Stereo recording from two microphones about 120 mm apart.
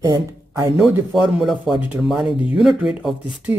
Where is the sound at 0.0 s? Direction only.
25° right (ahead or behind).